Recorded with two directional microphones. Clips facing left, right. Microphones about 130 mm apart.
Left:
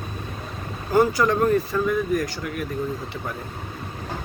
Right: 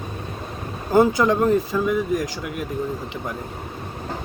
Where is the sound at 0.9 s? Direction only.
20° right (ahead or behind).